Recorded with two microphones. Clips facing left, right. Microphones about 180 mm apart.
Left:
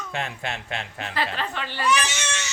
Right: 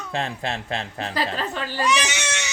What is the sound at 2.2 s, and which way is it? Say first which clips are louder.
Crying: right 2 dB; 15° right (ahead or behind).